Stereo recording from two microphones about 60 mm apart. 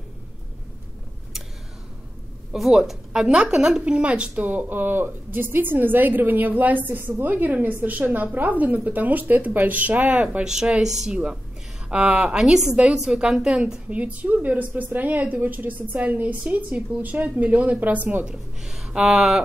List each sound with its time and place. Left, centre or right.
2.5 s a woman's voice: centre
10.5 s a woman's voice: centre
11.9 s a woman's voice: centre
12.4 s a woman's voice: centre
13.8 s a woman's voice: right
18.2 s speech: centre